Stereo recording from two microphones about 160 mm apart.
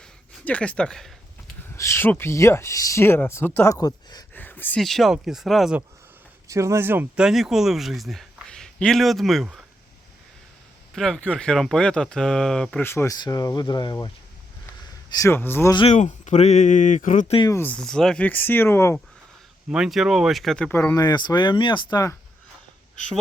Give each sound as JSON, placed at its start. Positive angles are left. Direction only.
{"t": 0.0, "sound": "a sound", "side_deg": 10}
{"t": 1.7, "sound": "speech", "side_deg": 15}
{"t": 4.4, "sound": "speech", "side_deg": 10}
{"t": 6.5, "sound": "speech", "side_deg": -20}
{"t": 10.9, "sound": "speech", "side_deg": 0}
{"t": 15.1, "sound": "speech", "side_deg": 15}
{"t": 15.9, "sound": "speech", "side_deg": 45}
{"t": 17.5, "sound": "speech", "side_deg": 10}
{"t": 19.7, "sound": "speech", "side_deg": -5}